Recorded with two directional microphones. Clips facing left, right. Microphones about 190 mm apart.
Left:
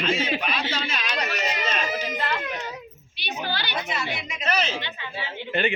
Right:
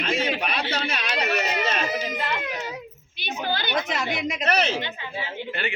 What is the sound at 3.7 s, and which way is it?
A woman's voice, 90° right.